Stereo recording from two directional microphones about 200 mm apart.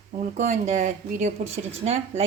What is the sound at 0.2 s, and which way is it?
Speech, 35° right (ahead or behind).